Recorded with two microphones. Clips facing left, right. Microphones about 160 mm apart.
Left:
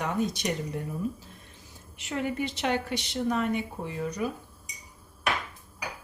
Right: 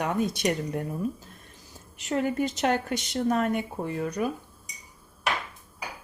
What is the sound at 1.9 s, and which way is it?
Speech, 40° right (ahead or behind).